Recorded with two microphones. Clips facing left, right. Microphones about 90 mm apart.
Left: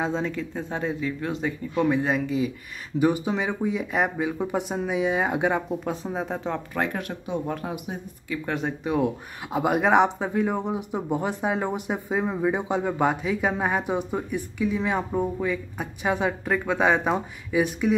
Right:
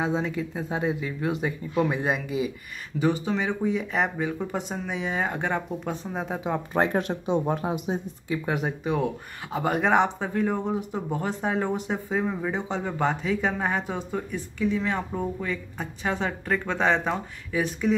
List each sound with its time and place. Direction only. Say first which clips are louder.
0.0 s speech: even; 5° right (ahead or behind)
3.0 s speech: left 2 dB; 10° left (ahead or behind)
6.7 s speech: right 4 dB; 30° right (ahead or behind)
8.5 s speech: left 1 dB; 10° right (ahead or behind)
8.8 s speech: left 2 dB; 5° left (ahead or behind)